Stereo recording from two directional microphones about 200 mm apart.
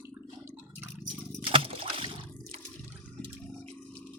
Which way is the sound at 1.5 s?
30° right (ahead or behind).